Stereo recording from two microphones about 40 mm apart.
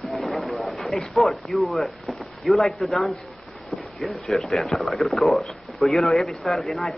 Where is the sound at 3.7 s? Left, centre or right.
Left.